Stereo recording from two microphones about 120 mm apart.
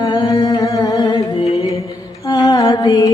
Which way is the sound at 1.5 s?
30° left (ahead or behind).